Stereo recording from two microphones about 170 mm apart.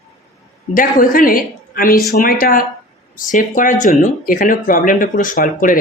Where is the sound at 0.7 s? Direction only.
55° left (ahead or behind).